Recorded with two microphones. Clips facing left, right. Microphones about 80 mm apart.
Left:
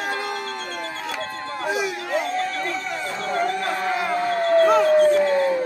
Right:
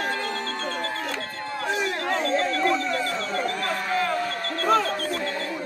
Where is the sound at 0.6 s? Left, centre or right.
Right.